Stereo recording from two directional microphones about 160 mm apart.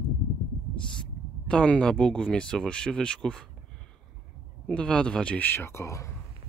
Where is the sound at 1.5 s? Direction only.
5° left (ahead or behind).